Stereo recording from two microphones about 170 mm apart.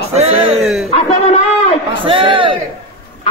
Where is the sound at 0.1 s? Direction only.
40° right (ahead or behind).